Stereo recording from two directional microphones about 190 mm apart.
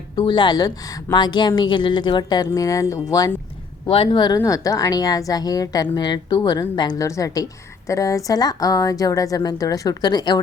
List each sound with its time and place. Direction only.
0.2 s a woman's voice: 25° left (ahead or behind)
3.8 s a woman's voice: 30° left (ahead or behind)